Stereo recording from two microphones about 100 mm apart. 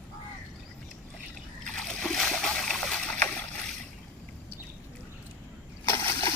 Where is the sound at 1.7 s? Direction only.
5° left (ahead or behind).